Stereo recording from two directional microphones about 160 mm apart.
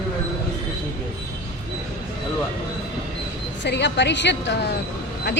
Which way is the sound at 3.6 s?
90° left.